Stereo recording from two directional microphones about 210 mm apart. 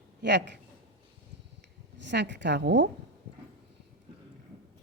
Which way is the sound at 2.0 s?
55° right (ahead or behind).